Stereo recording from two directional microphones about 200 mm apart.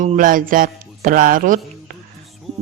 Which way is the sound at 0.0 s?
40° right (ahead or behind).